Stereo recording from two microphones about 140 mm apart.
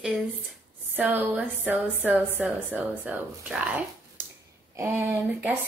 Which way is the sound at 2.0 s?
10° right (ahead or behind).